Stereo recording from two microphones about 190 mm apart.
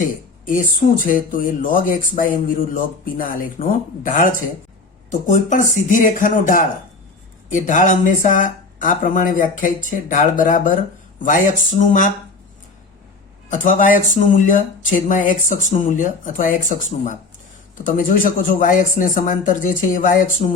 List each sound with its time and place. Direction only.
0.0 s a sound: 45° left (ahead or behind)
1.1 s speech: 45° left (ahead or behind)
13.5 s speech: 45° left (ahead or behind)